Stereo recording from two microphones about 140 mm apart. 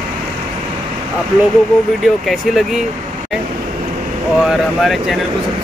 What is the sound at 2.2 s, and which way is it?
Speech, centre (ahead or behind).